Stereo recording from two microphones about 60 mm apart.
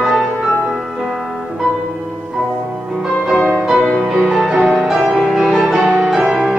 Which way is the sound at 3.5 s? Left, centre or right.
Centre.